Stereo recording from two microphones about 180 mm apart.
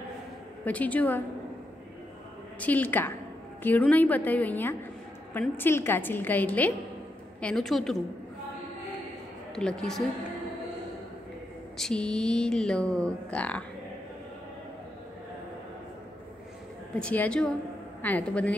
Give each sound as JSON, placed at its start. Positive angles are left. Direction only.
{"t": 0.7, "sound": "a woman's voice", "side_deg": 10}
{"t": 2.6, "sound": "a woman's voice", "side_deg": 10}
{"t": 9.6, "sound": "speech", "side_deg": 5}
{"t": 11.8, "sound": "speech", "side_deg": 5}
{"t": 17.0, "sound": "a woman's voice", "side_deg": 5}